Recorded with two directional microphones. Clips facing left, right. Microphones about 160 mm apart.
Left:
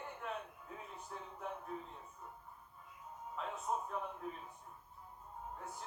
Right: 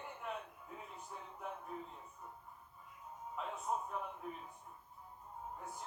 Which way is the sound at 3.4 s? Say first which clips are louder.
Even; 5° right (ahead or behind).